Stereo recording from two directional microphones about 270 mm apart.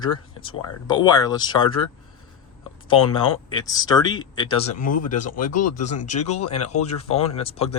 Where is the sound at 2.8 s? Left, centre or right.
Centre.